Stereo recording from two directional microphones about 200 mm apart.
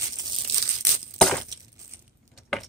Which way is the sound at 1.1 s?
5° left (ahead or behind).